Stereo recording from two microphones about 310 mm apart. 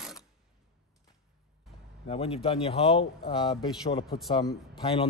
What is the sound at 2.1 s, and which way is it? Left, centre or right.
A man's voice, centre.